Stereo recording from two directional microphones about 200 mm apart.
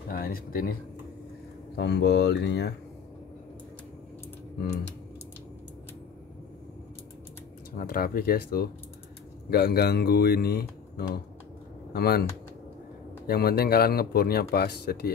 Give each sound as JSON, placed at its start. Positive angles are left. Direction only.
{"t": 0.1, "sound": "speech", "side_deg": 45}
{"t": 1.8, "sound": "speech", "side_deg": 55}
{"t": 7.7, "sound": "speech", "side_deg": 45}
{"t": 13.3, "sound": "speech", "side_deg": 50}